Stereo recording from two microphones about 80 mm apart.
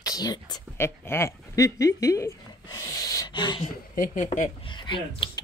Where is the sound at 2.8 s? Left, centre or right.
Left.